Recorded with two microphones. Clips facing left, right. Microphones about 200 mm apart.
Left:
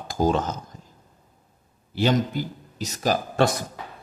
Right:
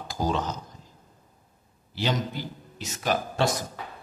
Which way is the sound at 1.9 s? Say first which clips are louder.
Left 6 dB; 50° left (ahead or behind).